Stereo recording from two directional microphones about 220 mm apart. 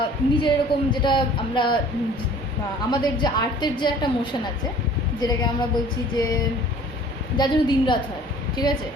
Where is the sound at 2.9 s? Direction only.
20° left (ahead or behind).